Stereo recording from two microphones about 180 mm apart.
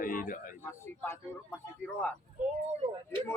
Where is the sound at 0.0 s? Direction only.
50° left (ahead or behind).